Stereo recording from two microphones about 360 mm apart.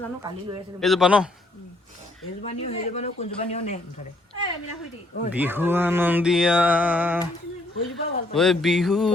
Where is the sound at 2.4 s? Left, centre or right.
Centre.